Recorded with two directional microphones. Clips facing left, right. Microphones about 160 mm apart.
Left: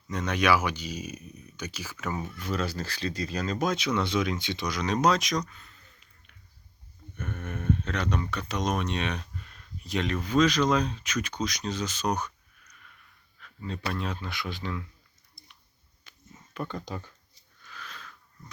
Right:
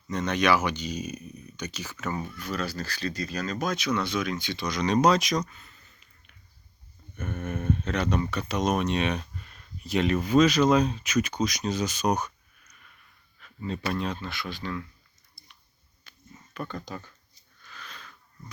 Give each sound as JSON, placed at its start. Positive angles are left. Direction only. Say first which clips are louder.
{"t": 0.1, "sound": "speech", "louder": "right 1 dB", "side_deg": 10}
{"t": 2.2, "sound": "speech", "louder": "left 1 dB", "side_deg": 25}
{"t": 4.6, "sound": "speech", "louder": "right 3 dB", "side_deg": 5}
{"t": 13.4, "sound": "speech", "louder": "right 3 dB", "side_deg": -10}
{"t": 14.1, "sound": "speech", "louder": "right 1 dB", "side_deg": 10}
{"t": 15.4, "sound": "a sound", "louder": "even", "side_deg": 20}
{"t": 16.6, "sound": "speech", "louder": "left 1 dB", "side_deg": 20}
{"t": 17.7, "sound": "a sound", "louder": "left 1 dB", "side_deg": 5}